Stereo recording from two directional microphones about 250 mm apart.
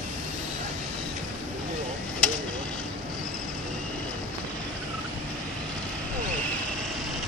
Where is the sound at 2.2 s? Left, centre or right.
Centre.